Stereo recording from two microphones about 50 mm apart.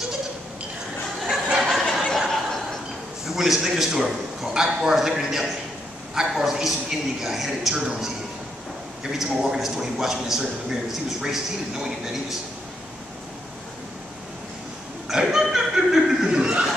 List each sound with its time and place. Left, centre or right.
1.3 s a sound: centre
2.1 s chuckle: centre
3.3 s a man's voice: centre
9.2 s a man's voice: centre
15.0 s chuckle: centre